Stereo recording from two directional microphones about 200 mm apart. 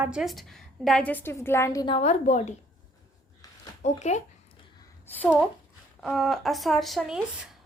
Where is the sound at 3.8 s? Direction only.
35° left (ahead or behind).